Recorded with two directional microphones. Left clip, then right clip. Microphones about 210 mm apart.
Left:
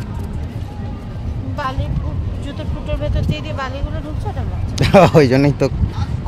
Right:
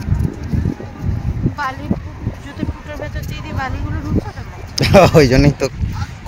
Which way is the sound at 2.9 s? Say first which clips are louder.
Left 4 dB; 55° left (ahead or behind).